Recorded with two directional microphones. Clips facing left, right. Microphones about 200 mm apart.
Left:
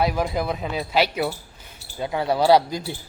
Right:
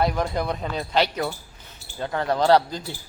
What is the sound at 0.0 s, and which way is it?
Speech, 5° left (ahead or behind).